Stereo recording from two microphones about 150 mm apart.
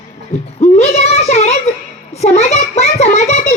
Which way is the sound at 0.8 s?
45° left (ahead or behind).